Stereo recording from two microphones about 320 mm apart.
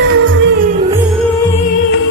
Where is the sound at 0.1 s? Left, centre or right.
Right.